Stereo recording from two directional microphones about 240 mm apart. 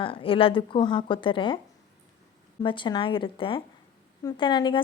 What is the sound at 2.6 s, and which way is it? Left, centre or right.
A woman's voice, centre.